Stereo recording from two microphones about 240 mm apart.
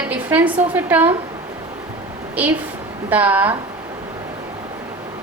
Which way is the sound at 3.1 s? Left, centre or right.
Centre.